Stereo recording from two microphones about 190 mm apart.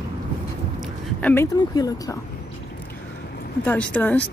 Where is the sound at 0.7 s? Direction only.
10° left (ahead or behind).